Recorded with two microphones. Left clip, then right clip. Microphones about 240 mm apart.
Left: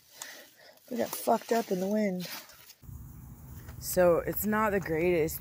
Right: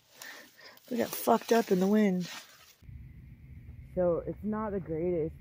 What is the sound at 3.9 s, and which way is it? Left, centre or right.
Speech, centre.